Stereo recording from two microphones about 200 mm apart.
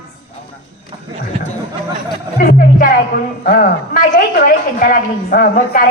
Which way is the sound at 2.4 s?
45° left (ahead or behind).